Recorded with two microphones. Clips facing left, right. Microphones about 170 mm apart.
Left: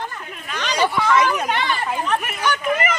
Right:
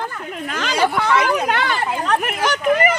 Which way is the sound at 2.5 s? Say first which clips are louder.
Right 6 dB; 35° right (ahead or behind).